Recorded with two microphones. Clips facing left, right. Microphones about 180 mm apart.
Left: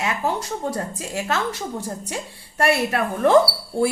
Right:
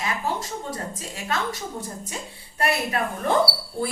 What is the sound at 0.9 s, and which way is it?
Speech, 75° left (ahead or behind).